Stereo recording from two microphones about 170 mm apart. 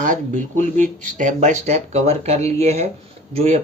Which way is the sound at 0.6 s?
50° right (ahead or behind).